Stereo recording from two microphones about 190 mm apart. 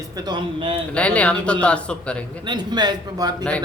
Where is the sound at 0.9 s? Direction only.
5° left (ahead or behind).